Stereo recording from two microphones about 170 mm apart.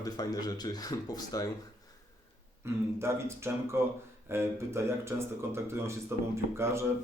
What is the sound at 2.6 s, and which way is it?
Speech, 15° right (ahead or behind).